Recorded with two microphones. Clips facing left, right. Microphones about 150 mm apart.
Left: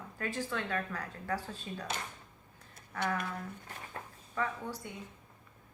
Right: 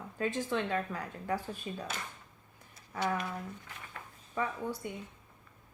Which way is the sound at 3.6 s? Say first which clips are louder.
Left 3 dB; 40° left (ahead or behind).